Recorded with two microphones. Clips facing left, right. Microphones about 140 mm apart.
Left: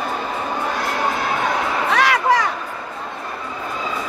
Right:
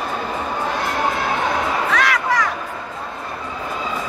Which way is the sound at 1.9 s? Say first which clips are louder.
Left 6 dB; 30° left (ahead or behind).